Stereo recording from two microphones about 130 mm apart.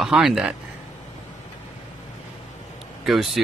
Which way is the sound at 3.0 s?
Centre (ahead or behind).